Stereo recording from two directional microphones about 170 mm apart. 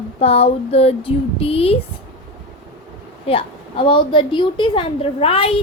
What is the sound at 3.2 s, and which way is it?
A woman's voice, 30° left (ahead or behind).